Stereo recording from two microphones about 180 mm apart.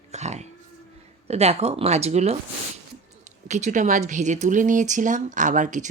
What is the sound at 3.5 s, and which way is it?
Speech, 40° right (ahead or behind).